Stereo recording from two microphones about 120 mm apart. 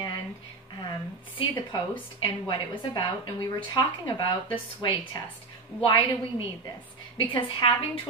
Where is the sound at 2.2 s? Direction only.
45° left (ahead or behind).